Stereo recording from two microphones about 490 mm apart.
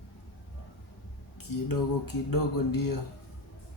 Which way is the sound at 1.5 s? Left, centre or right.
Left.